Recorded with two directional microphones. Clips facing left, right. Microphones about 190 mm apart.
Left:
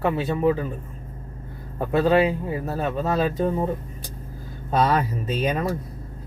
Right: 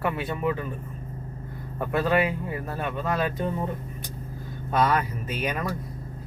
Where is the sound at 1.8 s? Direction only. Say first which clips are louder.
Left 5 dB; 25° left (ahead or behind).